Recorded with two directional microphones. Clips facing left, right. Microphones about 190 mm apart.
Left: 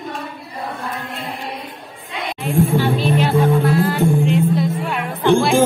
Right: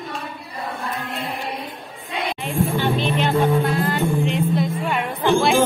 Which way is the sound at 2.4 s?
5° left (ahead or behind).